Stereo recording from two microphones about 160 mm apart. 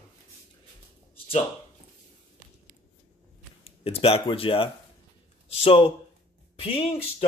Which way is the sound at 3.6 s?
35° left (ahead or behind).